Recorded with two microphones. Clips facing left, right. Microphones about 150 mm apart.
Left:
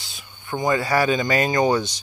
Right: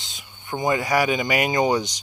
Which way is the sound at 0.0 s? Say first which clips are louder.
Left 1 dB; 20° right (ahead or behind).